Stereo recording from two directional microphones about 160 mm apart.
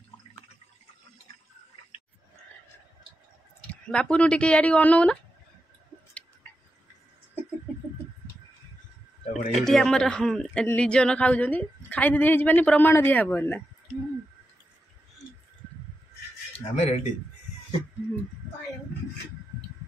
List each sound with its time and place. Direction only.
3.9 s a man's voice: 5° left (ahead or behind)
9.2 s a sound: 45° left (ahead or behind)
9.6 s a man's voice: 5° left (ahead or behind)
16.7 s speech: 45° left (ahead or behind)